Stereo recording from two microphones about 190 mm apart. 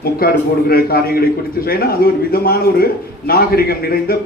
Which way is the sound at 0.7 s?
50° left (ahead or behind).